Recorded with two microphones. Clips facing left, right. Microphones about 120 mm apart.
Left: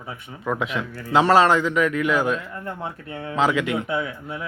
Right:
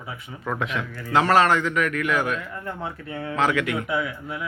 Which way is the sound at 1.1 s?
25° left (ahead or behind).